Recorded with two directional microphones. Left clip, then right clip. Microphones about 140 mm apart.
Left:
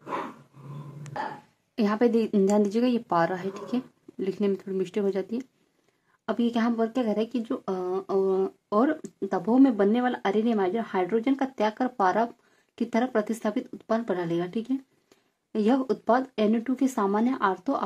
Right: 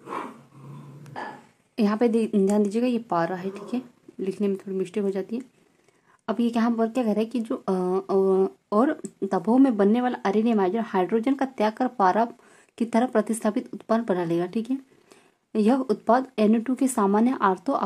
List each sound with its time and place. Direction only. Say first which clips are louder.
1.8 s speech: right 1 dB; 15° right (ahead or behind)